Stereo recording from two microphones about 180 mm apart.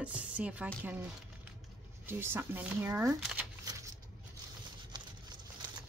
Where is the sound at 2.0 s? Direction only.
15° right (ahead or behind).